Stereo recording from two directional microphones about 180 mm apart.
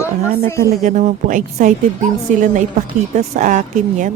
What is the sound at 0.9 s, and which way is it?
Speech, 45° right (ahead or behind).